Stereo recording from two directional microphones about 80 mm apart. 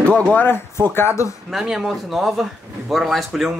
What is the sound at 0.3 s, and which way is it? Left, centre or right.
Speech, left.